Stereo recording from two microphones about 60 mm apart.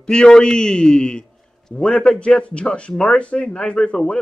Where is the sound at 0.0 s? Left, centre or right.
Centre.